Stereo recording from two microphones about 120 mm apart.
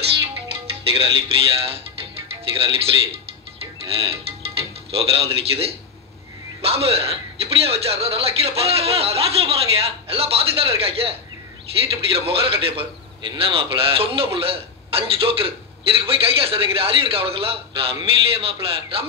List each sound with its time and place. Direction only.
0.9 s a man's voice: 55° right (ahead or behind)